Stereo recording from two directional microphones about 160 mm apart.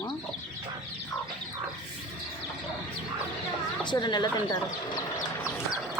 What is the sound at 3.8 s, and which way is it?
Speech, 30° left (ahead or behind).